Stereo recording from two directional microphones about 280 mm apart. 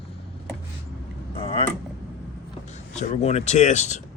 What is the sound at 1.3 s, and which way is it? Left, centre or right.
Vehicle, centre.